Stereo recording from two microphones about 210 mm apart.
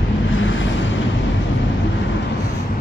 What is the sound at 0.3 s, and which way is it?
Waves, 65° left (ahead or behind).